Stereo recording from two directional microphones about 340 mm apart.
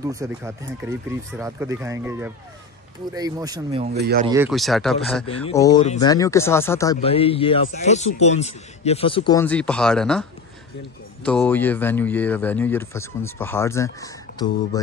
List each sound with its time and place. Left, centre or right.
0.0 s speech: centre
3.9 s speech: right
4.3 s speech: centre
5.2 s a man's voice: centre
11.2 s speech: centre